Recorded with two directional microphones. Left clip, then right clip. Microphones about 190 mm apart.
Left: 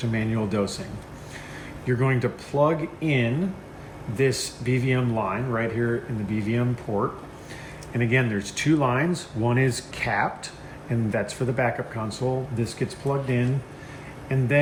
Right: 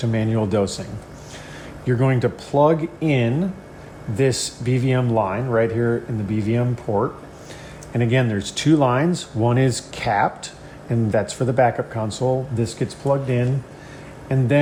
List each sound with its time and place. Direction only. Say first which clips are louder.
0.0 s speech: right 5 dB; 55° right (ahead or behind)
1.9 s speech: right 4 dB; 60° right (ahead or behind)